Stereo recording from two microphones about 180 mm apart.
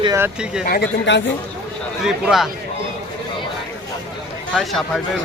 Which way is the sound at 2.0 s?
Centre (ahead or behind).